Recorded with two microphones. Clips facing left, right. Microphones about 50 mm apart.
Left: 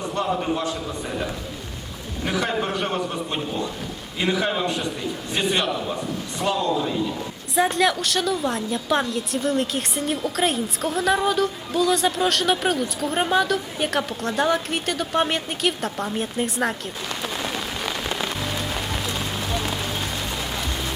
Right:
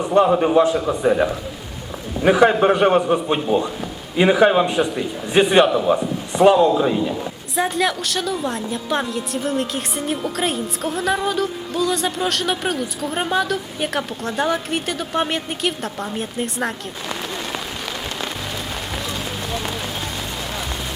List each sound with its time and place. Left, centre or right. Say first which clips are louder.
0.0 s a man's voice: right 9 dB; right
2.2 s a man's voice: right 11 dB; right
4.6 s a man's voice: right 5 dB; centre
7.5 s a woman's voice: left 1 dB; centre
19.5 s run: right 1 dB; centre